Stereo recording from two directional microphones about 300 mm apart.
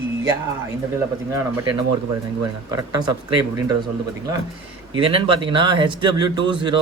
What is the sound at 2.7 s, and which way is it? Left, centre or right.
Speech, centre.